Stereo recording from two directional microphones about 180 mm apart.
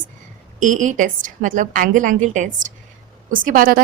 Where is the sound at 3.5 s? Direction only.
50° right (ahead or behind).